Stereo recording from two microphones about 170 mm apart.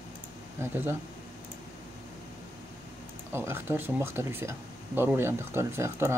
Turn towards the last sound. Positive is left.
turn(degrees=-15)  # may be behind; listen again after turning